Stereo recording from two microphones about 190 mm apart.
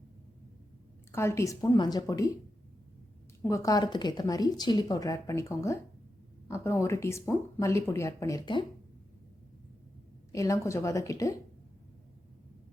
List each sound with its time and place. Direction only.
1.1 s speech: 15° left (ahead or behind)
3.4 s speech: 15° left (ahead or behind)
10.3 s speech: 15° left (ahead or behind)